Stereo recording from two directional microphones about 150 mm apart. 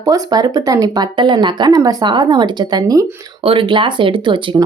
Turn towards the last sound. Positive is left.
turn(degrees=-30)  # may be behind; listen again after turning